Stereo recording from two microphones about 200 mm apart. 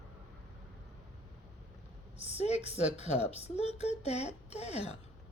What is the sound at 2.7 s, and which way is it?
Speech, 35° left (ahead or behind).